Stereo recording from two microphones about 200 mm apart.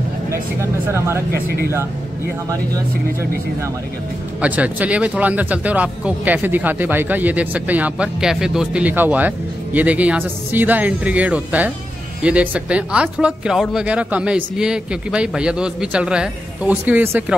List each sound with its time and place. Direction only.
0.3 s speech: 15° right (ahead or behind)
1.3 s speech: 50° right (ahead or behind)
4.4 s speech: 5° right (ahead or behind)